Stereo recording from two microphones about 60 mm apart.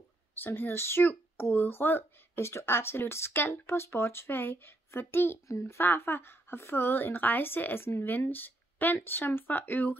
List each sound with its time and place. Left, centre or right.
0.3 s a child's voice: left
5.5 s speech: left
5.8 s a child's voice: left